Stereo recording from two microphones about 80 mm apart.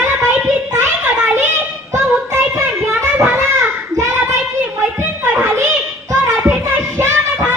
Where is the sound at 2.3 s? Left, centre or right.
Right.